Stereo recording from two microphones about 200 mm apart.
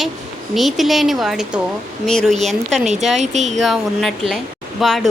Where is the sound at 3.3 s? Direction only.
35° right (ahead or behind).